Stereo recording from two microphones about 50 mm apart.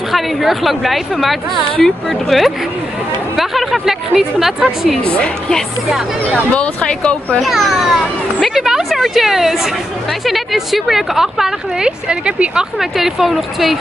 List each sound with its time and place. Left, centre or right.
0.1 s a woman's voice: centre
5.0 s speech: left
6.3 s speech: left
7.3 s a woman's voice: centre
8.5 s a sound: centre
10.2 s a woman's voice: centre
12.1 s speech: centre
12.7 s a woman's voice: centre